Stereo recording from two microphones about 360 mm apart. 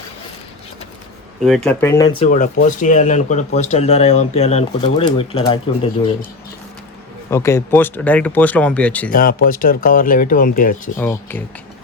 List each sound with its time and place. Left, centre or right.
1.5 s speech: centre
7.3 s speech: centre
9.1 s speech: left
10.9 s speech: centre